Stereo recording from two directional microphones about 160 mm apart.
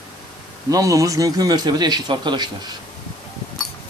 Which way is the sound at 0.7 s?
20° right (ahead or behind).